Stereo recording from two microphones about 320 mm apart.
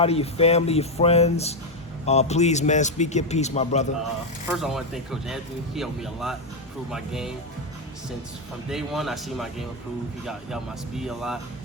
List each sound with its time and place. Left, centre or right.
0.0 s a man's voice: centre
4.5 s a man's voice: centre
8.7 s a man's voice: centre